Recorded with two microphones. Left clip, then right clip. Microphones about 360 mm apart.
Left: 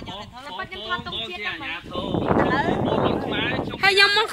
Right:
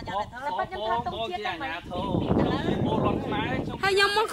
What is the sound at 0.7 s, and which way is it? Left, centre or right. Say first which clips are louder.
Speech: even; right.